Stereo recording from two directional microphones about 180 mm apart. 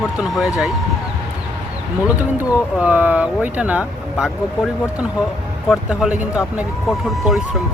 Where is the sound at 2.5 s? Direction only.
5° right (ahead or behind).